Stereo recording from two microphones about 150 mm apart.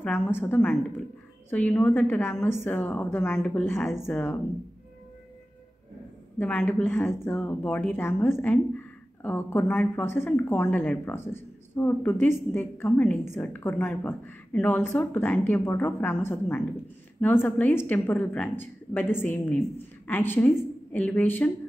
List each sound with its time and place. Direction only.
0.0 s speech: 15° left (ahead or behind)
6.3 s speech: 15° left (ahead or behind)